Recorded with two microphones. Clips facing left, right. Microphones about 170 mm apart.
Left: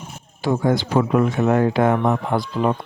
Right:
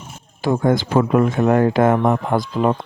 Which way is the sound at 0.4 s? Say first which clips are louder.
Right 2 dB; 50° right (ahead or behind).